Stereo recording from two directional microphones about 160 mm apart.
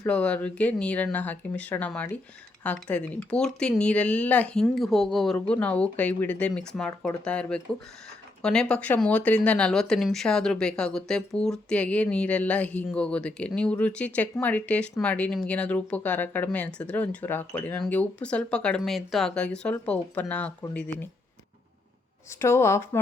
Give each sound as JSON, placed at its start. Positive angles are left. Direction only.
{"t": 0.0, "sound": "speech", "side_deg": 10}
{"t": 22.4, "sound": "speech", "side_deg": 15}